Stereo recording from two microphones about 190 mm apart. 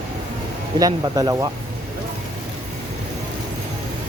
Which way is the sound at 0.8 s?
20° right (ahead or behind).